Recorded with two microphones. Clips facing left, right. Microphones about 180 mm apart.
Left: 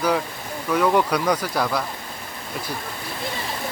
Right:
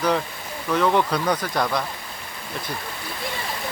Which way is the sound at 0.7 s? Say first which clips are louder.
Left 1 dB; 10° left (ahead or behind).